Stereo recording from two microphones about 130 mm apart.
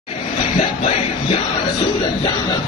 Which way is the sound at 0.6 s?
45° left (ahead or behind).